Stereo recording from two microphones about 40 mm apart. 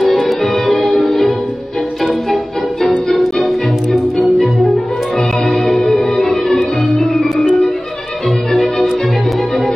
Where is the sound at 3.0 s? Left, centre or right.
Centre.